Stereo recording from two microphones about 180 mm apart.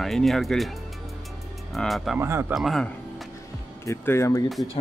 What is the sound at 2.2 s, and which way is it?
Speech, 15° right (ahead or behind).